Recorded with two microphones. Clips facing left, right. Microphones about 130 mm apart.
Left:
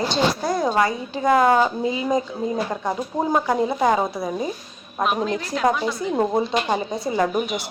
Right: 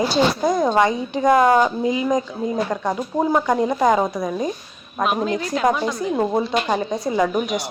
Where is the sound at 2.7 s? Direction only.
10° left (ahead or behind).